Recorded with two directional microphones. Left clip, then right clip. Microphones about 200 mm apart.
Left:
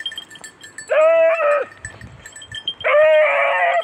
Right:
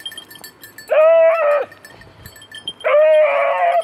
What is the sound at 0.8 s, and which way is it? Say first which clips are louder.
Sheep: right 2 dB; 60° left (ahead or behind).